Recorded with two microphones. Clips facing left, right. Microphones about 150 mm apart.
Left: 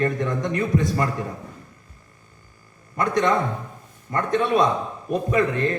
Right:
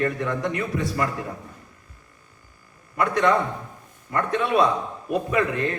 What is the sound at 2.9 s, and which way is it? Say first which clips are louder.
A man's voice: even; 35° left (ahead or behind).